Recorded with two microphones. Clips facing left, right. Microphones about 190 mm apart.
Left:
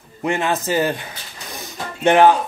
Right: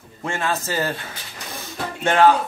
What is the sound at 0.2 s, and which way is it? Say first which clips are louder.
Speech: left 4 dB; 15° left (ahead or behind).